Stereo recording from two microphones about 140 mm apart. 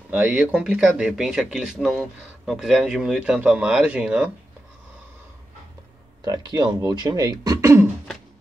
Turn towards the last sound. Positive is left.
turn(degrees=-25)  # may be behind; listen again after turning